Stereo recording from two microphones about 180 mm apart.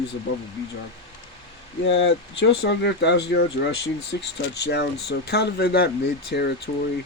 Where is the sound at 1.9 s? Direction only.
80° left; by 6.5 s 65° left (ahead or behind).